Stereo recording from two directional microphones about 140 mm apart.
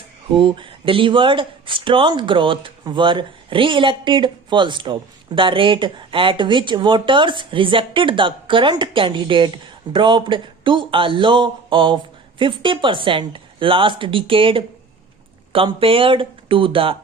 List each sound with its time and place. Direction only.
0.3 s speech: 35° right (ahead or behind)